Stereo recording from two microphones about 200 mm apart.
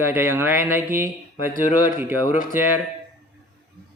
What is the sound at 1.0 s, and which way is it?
Speech, 45° left (ahead or behind).